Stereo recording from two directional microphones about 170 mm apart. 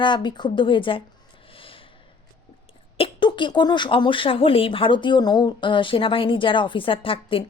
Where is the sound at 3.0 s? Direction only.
30° left (ahead or behind).